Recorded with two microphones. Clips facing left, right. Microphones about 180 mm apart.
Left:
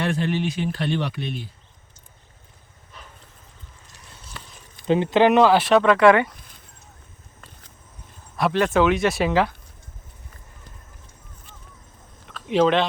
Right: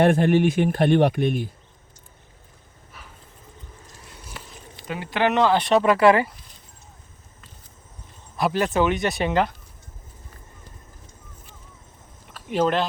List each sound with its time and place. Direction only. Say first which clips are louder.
0.0 s speech: right 7 dB; 50° right (ahead or behind)
4.9 s speech: left 7 dB; 20° left (ahead or behind)
5.6 s speech: left 1 dB; 5° right (ahead or behind)
8.4 s speech: left 2 dB; centre (ahead or behind)
12.5 s speech: left 3 dB; 5° right (ahead or behind)